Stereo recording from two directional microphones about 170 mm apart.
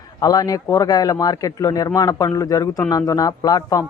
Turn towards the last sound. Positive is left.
turn(degrees=20)  # may be behind; listen again after turning